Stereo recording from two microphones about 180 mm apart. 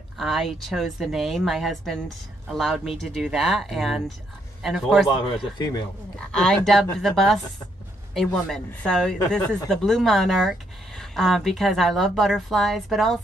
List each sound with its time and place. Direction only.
0.2 s speech: centre (ahead or behind)
5.1 s a man's voice: 25° left (ahead or behind)
6.1 s speech: 5° left (ahead or behind)